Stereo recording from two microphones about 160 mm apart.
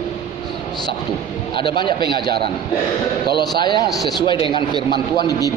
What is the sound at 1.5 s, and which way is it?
Speech, 30° left (ahead or behind).